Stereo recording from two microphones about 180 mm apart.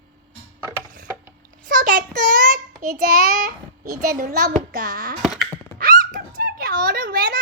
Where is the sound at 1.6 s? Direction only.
50° right (ahead or behind).